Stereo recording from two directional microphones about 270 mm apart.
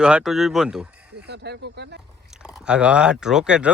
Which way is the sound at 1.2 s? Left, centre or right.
Right.